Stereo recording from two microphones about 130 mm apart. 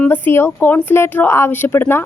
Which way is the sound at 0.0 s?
15° left (ahead or behind).